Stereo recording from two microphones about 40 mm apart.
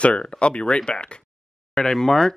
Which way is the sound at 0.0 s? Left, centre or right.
Left.